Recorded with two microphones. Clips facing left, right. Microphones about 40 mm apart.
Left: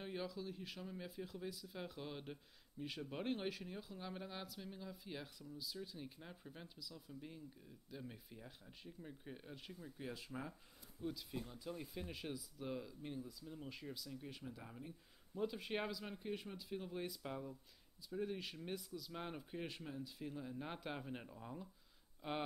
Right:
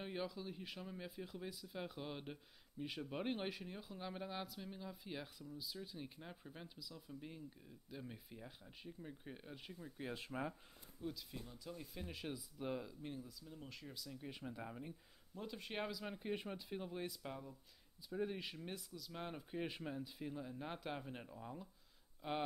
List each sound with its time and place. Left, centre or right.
0.0 s speech: centre
10.1 s speech: right
11.0 s speech: centre
11.3 s speech: centre
11.9 s speech: centre
14.4 s speech: right
15.3 s speech: centre
16.2 s speech: centre
16.8 s speech: centre
18.1 s speech: centre
19.6 s speech: centre